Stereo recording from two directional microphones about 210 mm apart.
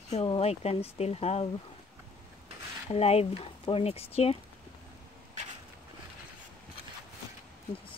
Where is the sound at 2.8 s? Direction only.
30° left (ahead or behind).